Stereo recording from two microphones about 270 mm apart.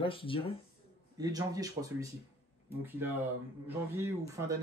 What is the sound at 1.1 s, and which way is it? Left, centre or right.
Speech, centre.